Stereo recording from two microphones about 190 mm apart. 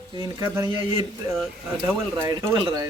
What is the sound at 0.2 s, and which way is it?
Speech, 15° right (ahead or behind).